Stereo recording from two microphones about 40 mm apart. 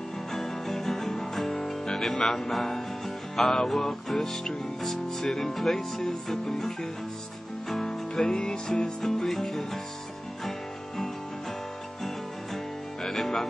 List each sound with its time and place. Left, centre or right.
0.3 s music: centre
9.0 s music: centre
13.0 s music: centre